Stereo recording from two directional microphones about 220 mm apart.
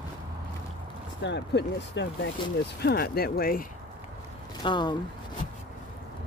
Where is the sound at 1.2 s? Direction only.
55° left (ahead or behind).